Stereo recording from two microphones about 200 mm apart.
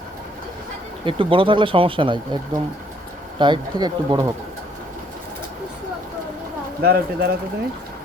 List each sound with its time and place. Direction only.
1.0 s speech: 25° right (ahead or behind)
6.8 s speech: 50° right (ahead or behind)